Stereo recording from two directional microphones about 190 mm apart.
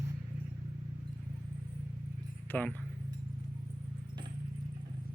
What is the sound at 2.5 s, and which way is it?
Speech, 10° left (ahead or behind).